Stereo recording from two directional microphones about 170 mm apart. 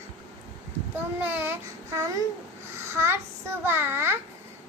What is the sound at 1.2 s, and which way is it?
A child's voice, 10° right (ahead or behind).